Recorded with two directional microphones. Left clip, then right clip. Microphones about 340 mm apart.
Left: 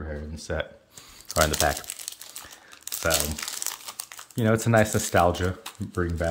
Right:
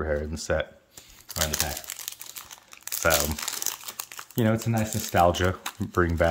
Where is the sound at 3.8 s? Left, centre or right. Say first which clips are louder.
Right 1 dB; centre.